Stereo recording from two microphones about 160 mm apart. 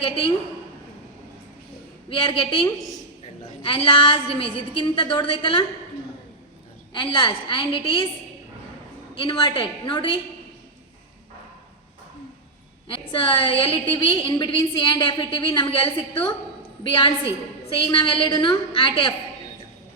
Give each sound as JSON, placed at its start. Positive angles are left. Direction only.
{"t": 2.0, "sound": "a woman's voice", "side_deg": 35}
{"t": 6.9, "sound": "a woman's voice", "side_deg": 30}
{"t": 9.1, "sound": "a woman's voice", "side_deg": 30}
{"t": 12.9, "sound": "a woman's voice", "side_deg": 30}